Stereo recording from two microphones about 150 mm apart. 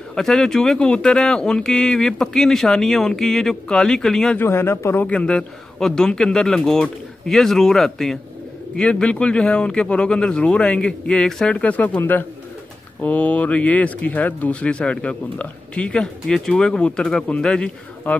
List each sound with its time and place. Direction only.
0.1 s speech: 5° left (ahead or behind)
4.4 s speech: 15° left (ahead or behind)